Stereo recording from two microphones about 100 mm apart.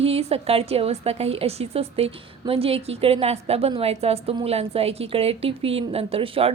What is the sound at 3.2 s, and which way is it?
A woman's voice, 90° right.